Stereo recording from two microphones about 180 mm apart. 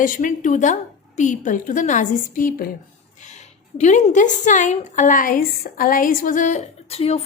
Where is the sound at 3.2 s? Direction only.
40° left (ahead or behind).